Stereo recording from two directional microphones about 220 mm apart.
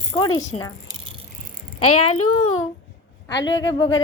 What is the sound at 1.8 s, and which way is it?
Speech, 90° left.